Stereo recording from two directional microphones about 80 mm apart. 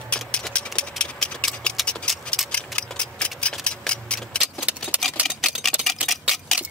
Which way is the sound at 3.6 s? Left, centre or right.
Centre.